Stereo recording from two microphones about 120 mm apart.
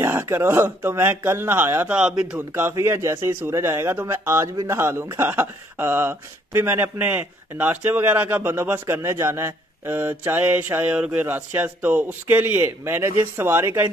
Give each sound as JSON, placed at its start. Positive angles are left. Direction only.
{"t": 0.0, "sound": "speech", "side_deg": -20}